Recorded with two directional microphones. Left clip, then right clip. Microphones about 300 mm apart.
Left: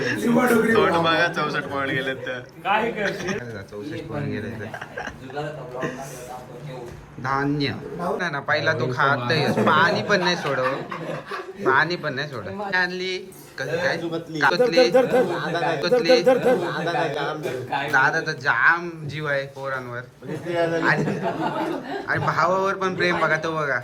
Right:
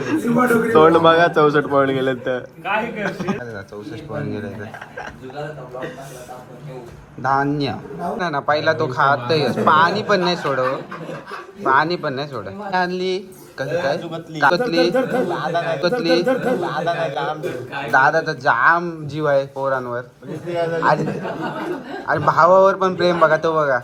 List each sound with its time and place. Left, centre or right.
0.0 s a sound: centre
0.4 s a man's voice: centre
7.2 s a man's voice: centre
14.6 s a man's voice: centre
14.9 s a man's voice: centre